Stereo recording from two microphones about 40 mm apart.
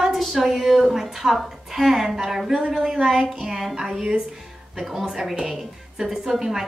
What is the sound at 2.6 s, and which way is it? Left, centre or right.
Speech, right.